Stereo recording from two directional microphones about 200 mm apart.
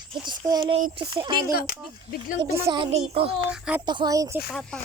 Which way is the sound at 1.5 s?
45° left (ahead or behind).